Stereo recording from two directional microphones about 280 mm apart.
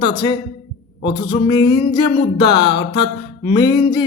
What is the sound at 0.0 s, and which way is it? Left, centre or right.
Music, centre.